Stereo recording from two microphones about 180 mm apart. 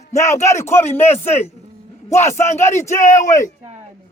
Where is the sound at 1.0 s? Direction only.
35° left (ahead or behind).